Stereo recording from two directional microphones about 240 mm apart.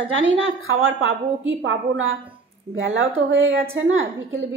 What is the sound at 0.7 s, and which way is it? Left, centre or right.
A woman's voice, right.